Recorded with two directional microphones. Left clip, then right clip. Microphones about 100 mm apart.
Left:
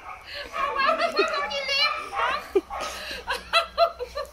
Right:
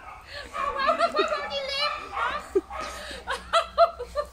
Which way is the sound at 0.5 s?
10° right (ahead or behind).